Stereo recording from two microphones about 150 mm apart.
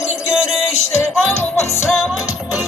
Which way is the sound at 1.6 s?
20° left (ahead or behind).